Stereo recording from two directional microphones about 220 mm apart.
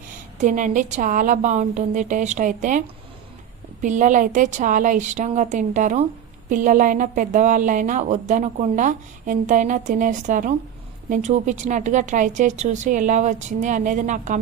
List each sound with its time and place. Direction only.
0.3 s speech: 35° right (ahead or behind)